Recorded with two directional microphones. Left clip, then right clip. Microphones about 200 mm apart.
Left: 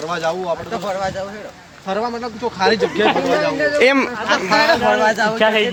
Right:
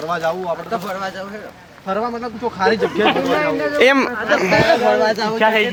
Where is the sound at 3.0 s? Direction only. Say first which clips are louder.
Even; 55° right (ahead or behind).